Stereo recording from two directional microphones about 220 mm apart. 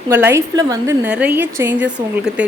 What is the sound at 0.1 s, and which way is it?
A woman's voice, 10° right (ahead or behind).